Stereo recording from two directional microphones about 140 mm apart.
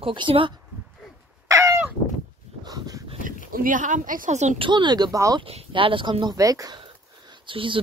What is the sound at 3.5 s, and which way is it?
A woman's voice, 75° right (ahead or behind).